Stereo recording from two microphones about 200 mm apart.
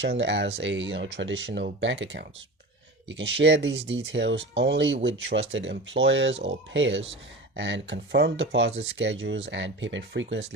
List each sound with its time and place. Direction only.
0.0 s speech: 60° right (ahead or behind)